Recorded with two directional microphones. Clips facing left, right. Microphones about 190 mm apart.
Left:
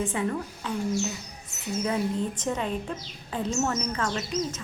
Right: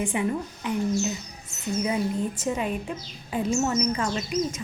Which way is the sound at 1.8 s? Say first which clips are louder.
Right 1 dB; 10° right (ahead or behind).